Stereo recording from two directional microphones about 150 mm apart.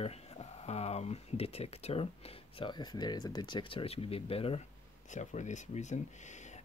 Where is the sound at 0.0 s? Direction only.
45° left (ahead or behind).